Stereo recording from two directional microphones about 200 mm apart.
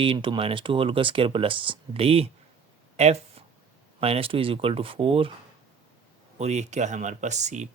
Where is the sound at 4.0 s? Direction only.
30° right (ahead or behind).